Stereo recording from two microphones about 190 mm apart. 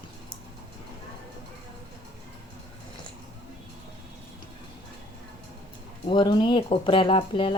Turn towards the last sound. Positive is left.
turn(degrees=25)  # may be behind; listen again after turning